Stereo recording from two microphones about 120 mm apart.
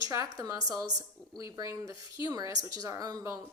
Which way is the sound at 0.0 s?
25° right (ahead or behind).